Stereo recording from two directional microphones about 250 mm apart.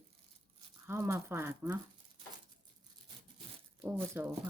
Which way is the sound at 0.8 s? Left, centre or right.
Centre.